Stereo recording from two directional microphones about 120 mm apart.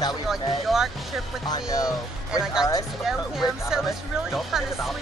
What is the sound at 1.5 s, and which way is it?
Speech, 25° left (ahead or behind).